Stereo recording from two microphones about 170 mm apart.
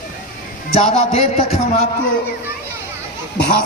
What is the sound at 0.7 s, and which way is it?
Speech, 35° left (ahead or behind).